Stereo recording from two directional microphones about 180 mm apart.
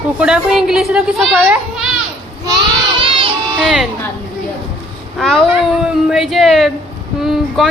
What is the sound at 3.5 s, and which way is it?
Speech, centre (ahead or behind).